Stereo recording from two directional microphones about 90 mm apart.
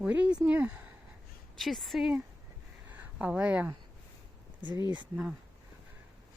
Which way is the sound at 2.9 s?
15° right (ahead or behind).